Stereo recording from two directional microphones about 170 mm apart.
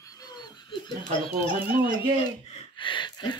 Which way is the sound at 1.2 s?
30° left (ahead or behind).